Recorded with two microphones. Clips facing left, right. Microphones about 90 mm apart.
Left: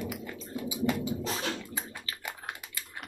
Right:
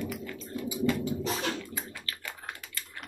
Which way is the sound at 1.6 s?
20° left (ahead or behind).